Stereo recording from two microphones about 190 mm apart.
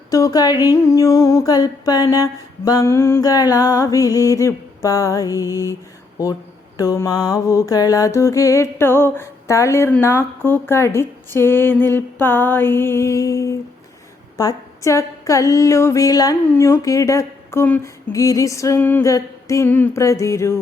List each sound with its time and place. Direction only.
0.1 s a sound: 20° left (ahead or behind)
0.7 s mantra: 15° left (ahead or behind)
6.7 s mantra: 15° left (ahead or behind)